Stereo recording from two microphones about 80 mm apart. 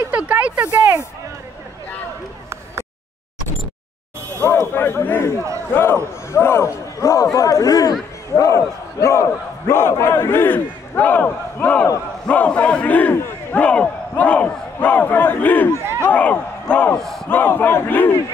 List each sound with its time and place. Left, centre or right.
0.1 s a sound: centre
0.7 s speech: centre
4.4 s a man's voice: left
13.1 s battle cry: left
13.6 s speech: centre
15.7 s speech: right
16.1 s speech: centre